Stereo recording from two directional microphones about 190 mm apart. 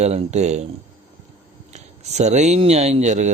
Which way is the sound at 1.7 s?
35° right (ahead or behind).